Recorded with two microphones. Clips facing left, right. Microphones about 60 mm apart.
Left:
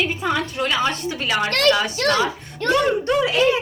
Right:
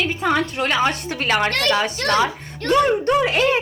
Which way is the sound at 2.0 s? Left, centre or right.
Right.